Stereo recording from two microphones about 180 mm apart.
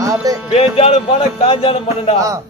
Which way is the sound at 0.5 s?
30° left (ahead or behind).